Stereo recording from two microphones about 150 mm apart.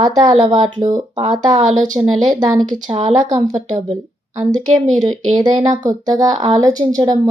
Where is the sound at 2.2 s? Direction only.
30° right (ahead or behind).